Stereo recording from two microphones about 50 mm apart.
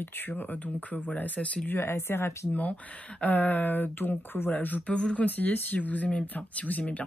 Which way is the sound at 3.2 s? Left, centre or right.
Left.